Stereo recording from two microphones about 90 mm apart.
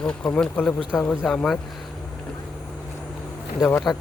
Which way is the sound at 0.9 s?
20° left (ahead or behind).